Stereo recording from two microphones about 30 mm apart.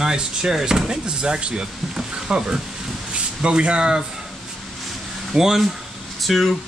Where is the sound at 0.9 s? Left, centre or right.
Right.